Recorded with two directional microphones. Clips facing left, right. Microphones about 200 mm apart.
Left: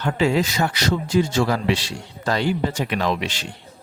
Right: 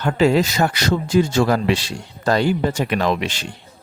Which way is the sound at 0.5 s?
50° right (ahead or behind).